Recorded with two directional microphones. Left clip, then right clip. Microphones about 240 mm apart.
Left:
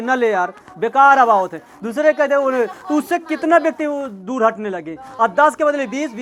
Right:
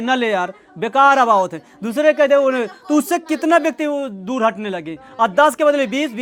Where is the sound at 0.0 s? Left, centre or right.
Right.